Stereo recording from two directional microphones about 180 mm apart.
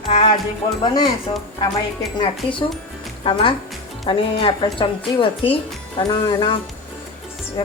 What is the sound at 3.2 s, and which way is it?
A woman's voice, 30° left (ahead or behind).